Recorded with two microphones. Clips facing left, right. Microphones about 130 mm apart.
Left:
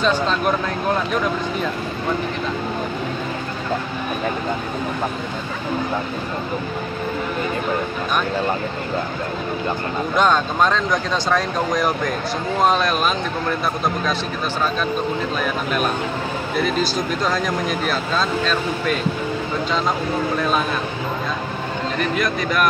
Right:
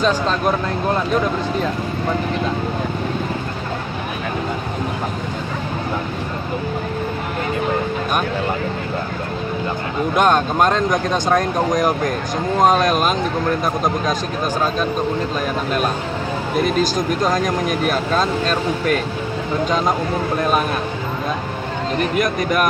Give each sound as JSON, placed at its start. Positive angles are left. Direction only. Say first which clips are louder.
{"t": 0.0, "sound": "speech", "louder": "right 1 dB", "side_deg": -40}
{"t": 10.1, "sound": "speech", "louder": "right 2 dB", "side_deg": -50}
{"t": 16.5, "sound": "speech", "louder": "right 3 dB", "side_deg": -45}
{"t": 22.1, "sound": "speech", "louder": "right 3 dB", "side_deg": -50}